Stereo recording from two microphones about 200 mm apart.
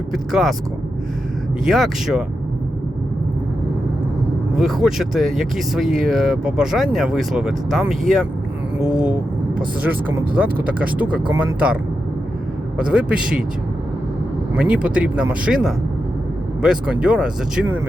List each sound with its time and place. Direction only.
0.1 s speech: centre (ahead or behind)
1.6 s speech: centre (ahead or behind)
4.5 s speech: centre (ahead or behind)
14.5 s speech: 5° right (ahead or behind)